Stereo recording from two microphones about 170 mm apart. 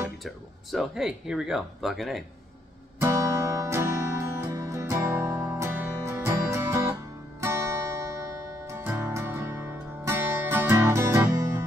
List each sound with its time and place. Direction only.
0.2 s speech: centre (ahead or behind)
3.0 s music: 15° right (ahead or behind)